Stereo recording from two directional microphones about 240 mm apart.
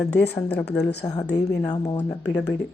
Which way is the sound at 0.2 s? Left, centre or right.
Centre.